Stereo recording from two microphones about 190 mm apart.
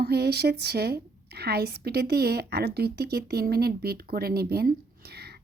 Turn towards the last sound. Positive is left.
turn(degrees=-60)  # may be behind; listen again after turning